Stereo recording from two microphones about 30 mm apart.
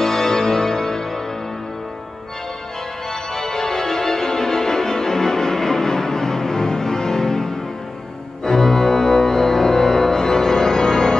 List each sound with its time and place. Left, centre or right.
0.0 s music: centre
3.1 s music: centre
8.5 s organ: centre